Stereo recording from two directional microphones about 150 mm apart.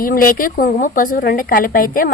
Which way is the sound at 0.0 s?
70° left (ahead or behind).